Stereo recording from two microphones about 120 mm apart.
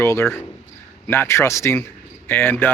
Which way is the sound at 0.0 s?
20° left (ahead or behind).